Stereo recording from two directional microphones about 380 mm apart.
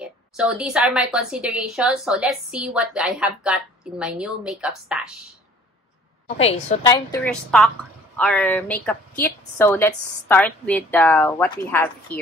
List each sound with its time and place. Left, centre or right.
0.0 s a woman's voice: centre
6.2 s a woman's voice: centre